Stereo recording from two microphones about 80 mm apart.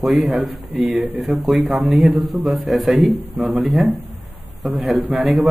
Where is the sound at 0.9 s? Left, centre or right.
Right.